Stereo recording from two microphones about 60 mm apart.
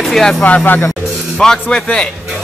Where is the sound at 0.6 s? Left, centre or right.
Left.